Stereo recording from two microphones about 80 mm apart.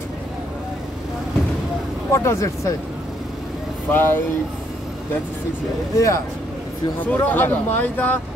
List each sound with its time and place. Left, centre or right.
2.1 s speech: left
3.9 s speech: left
5.9 s speech: left
7.1 s speech: left